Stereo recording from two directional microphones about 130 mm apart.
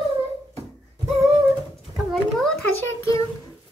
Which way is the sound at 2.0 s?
Centre (ahead or behind).